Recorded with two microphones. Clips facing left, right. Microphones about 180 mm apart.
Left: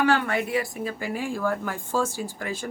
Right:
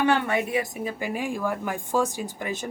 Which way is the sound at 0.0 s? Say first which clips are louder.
Even; 20° right (ahead or behind).